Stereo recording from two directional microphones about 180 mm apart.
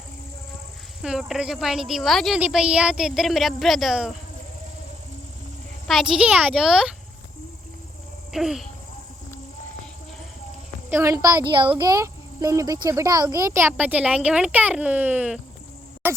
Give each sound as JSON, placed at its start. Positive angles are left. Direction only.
{"t": 1.0, "sound": "speech", "side_deg": -5}
{"t": 5.9, "sound": "speech", "side_deg": 0}
{"t": 8.3, "sound": "a child's voice", "side_deg": 0}
{"t": 10.8, "sound": "a woman's voice", "side_deg": -15}
{"t": 16.0, "sound": "a sound", "side_deg": -10}